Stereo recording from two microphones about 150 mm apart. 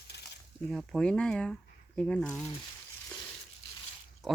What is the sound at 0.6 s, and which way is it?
Speech, 5° left (ahead or behind).